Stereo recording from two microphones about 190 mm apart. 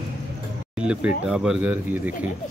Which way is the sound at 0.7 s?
5° right (ahead or behind).